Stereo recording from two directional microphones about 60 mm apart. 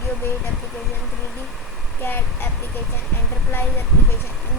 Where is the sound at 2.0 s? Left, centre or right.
Left.